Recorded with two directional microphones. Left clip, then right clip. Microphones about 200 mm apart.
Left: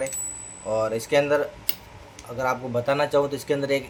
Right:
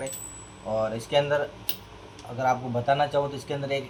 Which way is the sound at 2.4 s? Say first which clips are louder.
Left 1 dB; 55° left (ahead or behind).